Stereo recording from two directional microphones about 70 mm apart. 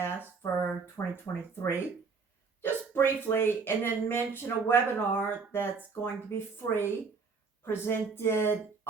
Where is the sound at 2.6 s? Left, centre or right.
Left.